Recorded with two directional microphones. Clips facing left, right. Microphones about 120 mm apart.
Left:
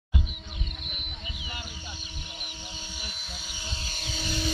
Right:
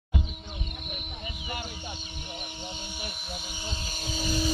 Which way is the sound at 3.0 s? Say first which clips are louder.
Right 4 dB; 55° right (ahead or behind).